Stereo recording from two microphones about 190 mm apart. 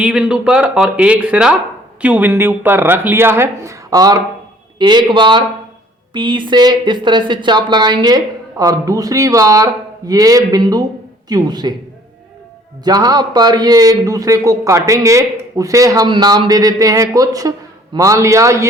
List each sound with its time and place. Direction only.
0.0 s a man's voice: 5° right (ahead or behind); by 11.7 s 20° right (ahead or behind)
12.8 s a man's voice: 20° right (ahead or behind)